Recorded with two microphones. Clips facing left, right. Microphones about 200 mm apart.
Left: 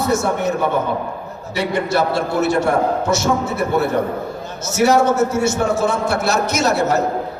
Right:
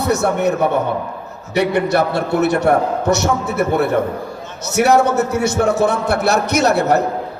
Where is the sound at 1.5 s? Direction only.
65° right (ahead or behind).